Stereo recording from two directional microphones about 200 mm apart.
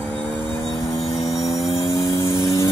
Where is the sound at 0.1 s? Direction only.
5° left (ahead or behind).